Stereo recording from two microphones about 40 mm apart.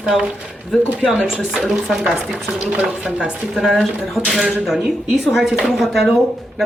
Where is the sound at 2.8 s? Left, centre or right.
Right.